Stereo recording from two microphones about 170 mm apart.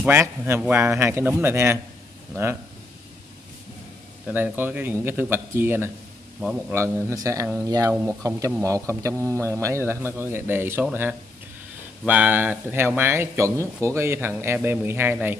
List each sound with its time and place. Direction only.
0.0 s speech: 15° right (ahead or behind)
4.3 s speech: 10° right (ahead or behind)